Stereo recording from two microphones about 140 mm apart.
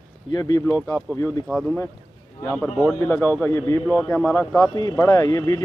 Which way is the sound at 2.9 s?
15° left (ahead or behind).